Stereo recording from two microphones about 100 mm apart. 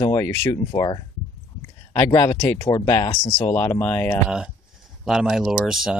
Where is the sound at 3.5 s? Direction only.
25° left (ahead or behind).